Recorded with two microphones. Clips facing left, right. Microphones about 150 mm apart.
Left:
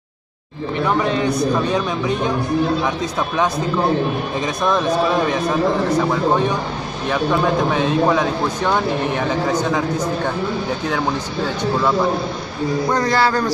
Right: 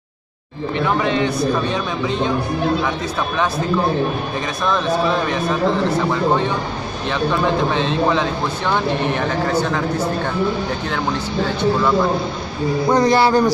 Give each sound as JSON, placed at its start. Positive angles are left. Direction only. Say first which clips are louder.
{"t": 0.8, "sound": "a man's voice", "louder": "even", "side_deg": 0}
{"t": 5.9, "sound": "speech", "louder": "left 1 dB", "side_deg": 10}
{"t": 12.8, "sound": "a man's voice", "louder": "right 4 dB", "side_deg": -20}